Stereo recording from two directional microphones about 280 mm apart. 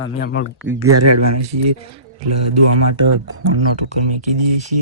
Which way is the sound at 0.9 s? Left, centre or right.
Right.